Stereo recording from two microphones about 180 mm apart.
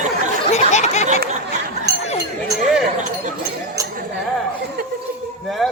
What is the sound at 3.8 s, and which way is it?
Chink, 20° right (ahead or behind).